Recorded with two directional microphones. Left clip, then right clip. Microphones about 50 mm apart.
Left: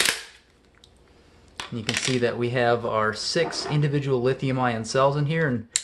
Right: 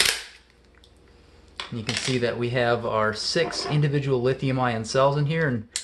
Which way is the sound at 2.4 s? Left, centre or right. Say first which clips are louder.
Left 1 dB; left.